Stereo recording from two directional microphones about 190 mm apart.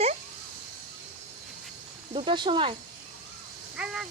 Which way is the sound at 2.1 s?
25° right (ahead or behind).